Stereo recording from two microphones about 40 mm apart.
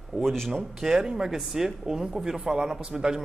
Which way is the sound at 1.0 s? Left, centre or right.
Centre.